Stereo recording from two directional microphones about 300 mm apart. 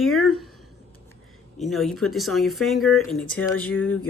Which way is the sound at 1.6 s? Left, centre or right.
Centre.